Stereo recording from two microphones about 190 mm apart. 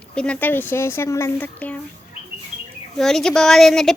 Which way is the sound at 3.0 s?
Centre (ahead or behind).